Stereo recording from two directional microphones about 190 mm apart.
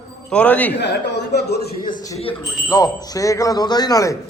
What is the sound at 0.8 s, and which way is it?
A man's voice, 65° left (ahead or behind).